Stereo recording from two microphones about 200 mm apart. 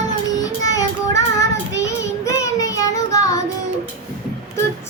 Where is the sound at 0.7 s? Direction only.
15° left (ahead or behind).